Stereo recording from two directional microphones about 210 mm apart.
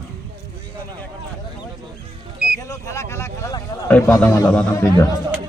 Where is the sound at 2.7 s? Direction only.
15° left (ahead or behind).